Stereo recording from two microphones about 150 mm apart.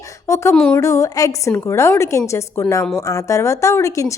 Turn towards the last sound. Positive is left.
turn(degrees=20)  # may be behind; listen again after turning